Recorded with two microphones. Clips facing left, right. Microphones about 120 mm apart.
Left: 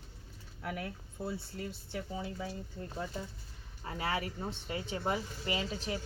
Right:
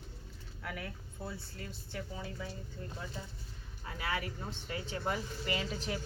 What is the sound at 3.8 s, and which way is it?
A woman's voice, 30° left (ahead or behind).